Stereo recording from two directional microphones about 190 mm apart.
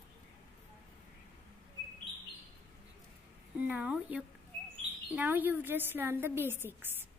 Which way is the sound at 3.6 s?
5° right (ahead or behind).